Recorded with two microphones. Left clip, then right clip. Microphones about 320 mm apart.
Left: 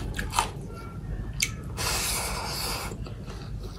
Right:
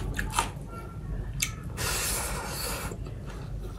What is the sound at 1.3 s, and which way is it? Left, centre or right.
Snort, centre.